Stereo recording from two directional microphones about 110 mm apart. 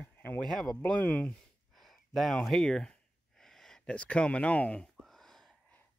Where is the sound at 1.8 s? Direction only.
Centre (ahead or behind).